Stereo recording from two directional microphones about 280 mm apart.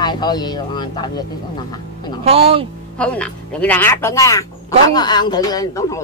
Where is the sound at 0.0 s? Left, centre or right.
Centre.